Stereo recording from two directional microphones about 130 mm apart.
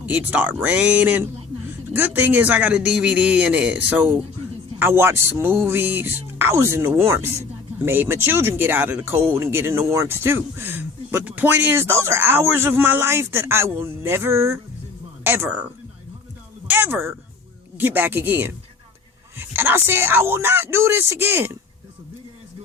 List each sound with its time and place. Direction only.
0.0 s speech: 10° right (ahead or behind)